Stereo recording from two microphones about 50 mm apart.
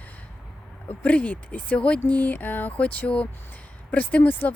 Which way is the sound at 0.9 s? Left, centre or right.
Left.